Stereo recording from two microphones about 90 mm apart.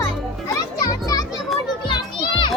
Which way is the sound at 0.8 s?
40° left (ahead or behind).